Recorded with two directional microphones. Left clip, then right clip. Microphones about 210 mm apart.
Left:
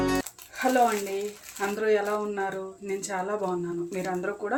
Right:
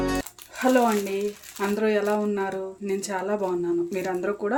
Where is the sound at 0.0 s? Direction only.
Centre (ahead or behind).